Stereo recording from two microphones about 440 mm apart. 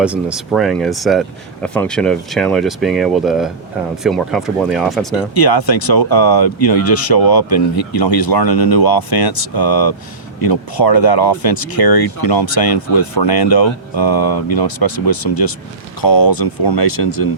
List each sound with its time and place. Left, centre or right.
0.0 s speech: centre
5.3 s speech: left